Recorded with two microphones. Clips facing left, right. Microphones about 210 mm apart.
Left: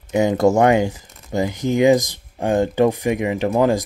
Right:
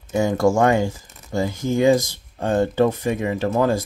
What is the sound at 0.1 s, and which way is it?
Speech, 20° left (ahead or behind).